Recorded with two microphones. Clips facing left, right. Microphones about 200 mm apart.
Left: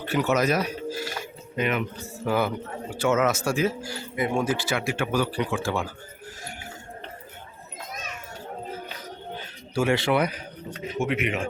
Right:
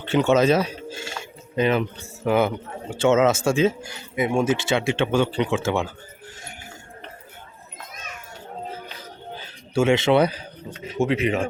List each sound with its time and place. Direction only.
0.0 s speech: 25° right (ahead or behind)
9.7 s speech: 25° right (ahead or behind)